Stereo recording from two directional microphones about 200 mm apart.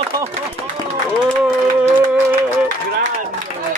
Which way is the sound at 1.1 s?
5° right (ahead or behind).